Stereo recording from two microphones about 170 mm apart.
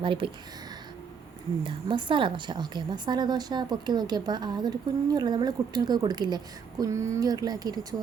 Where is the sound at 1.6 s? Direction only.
30° right (ahead or behind).